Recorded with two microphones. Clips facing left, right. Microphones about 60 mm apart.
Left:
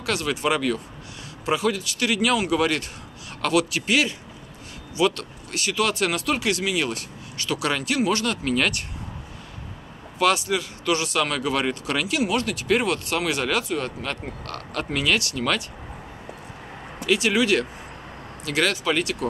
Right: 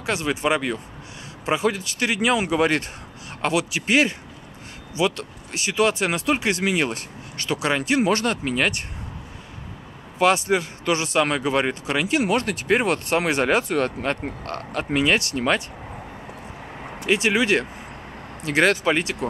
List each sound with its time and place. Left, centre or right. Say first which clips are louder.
0.0 s speech: right 1 dB; right
4.9 s speech: left 1 dB; right
8.5 s speech: left 1 dB; centre
10.1 s speech: right 2 dB; right
12.1 s speech: right 3 dB; right
14.7 s speech: right 3 dB; right
17.0 s speech: right 1 dB; right